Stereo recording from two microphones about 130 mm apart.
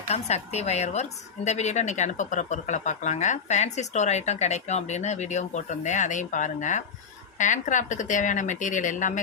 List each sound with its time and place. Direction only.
0.1 s speech: 55° left (ahead or behind); by 9.2 s 75° left (ahead or behind)